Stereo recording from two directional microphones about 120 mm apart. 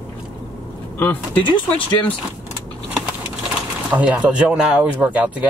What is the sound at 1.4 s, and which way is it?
Speech, 45° left (ahead or behind).